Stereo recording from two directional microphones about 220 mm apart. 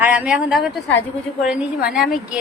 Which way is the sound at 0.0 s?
5° right (ahead or behind).